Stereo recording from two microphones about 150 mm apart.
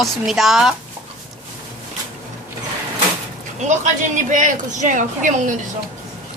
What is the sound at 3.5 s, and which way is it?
A man's voice, 50° right (ahead or behind).